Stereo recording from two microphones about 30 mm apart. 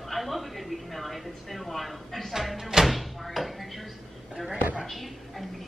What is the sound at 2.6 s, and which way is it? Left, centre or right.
Music, centre.